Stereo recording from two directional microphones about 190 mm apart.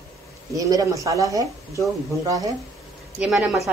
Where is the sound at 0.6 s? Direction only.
20° right (ahead or behind).